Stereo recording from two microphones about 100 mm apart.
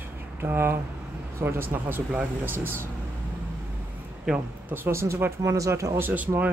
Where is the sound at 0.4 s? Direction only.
25° right (ahead or behind).